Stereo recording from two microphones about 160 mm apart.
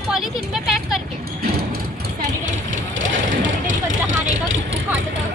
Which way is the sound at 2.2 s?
55° right (ahead or behind).